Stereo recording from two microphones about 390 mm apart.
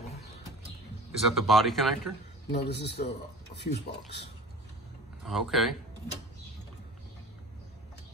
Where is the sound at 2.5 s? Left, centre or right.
Left.